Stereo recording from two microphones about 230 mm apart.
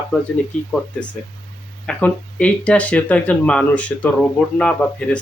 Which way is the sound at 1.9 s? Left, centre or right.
Centre.